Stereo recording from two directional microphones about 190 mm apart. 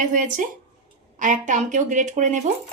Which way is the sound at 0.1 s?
45° right (ahead or behind).